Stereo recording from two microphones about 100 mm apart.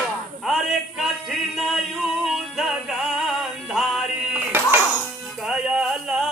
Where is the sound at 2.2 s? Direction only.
Centre (ahead or behind).